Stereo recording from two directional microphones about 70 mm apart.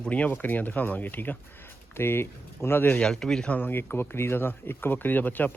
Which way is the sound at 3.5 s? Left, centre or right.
Left.